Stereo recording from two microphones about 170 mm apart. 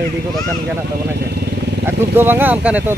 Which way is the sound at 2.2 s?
10° right (ahead or behind).